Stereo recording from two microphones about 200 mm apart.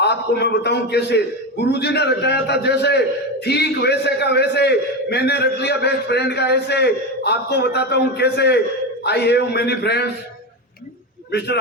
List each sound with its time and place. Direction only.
0.0 s a man's voice: 55° left (ahead or behind)
11.3 s a man's voice: 55° left (ahead or behind)